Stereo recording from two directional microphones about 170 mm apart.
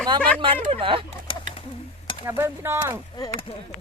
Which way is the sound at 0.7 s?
30° right (ahead or behind).